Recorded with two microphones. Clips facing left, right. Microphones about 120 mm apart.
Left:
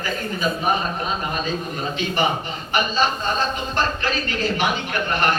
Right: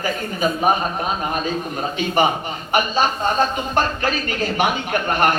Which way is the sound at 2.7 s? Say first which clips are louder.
Right 2 dB; 50° right (ahead or behind).